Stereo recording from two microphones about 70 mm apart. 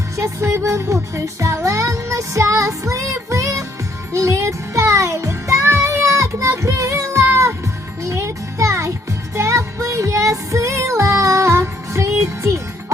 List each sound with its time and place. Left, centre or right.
0.2 s music: right